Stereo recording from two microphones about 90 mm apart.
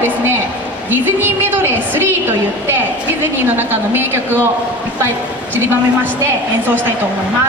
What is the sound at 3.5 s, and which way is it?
Speech, 25° right (ahead or behind).